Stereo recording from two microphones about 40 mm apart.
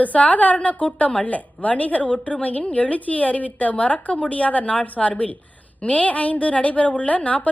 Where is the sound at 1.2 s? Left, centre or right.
Left.